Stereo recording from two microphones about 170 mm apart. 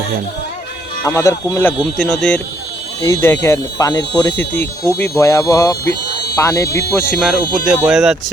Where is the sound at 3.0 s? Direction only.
15° left (ahead or behind).